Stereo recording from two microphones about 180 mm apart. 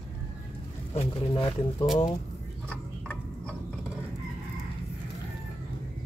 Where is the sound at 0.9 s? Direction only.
30° left (ahead or behind).